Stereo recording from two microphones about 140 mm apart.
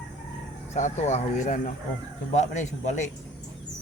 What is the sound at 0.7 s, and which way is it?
Speech, 55° left (ahead or behind).